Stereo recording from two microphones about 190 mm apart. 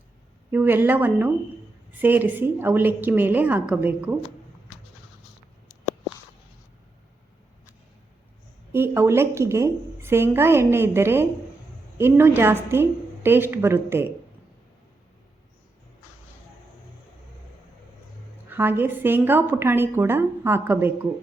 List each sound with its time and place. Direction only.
0.5 s a woman's voice: 10° right (ahead or behind)
8.7 s a woman's voice: 10° right (ahead or behind)
18.4 s a woman's voice: 10° right (ahead or behind)